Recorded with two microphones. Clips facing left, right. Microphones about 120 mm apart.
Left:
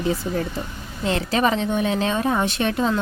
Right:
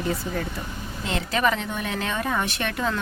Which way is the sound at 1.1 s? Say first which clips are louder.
Left 3 dB; 30° left (ahead or behind).